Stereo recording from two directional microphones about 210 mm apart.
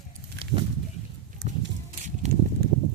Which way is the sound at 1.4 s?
35° right (ahead or behind).